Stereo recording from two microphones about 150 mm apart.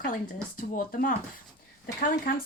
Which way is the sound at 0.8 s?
70° left (ahead or behind).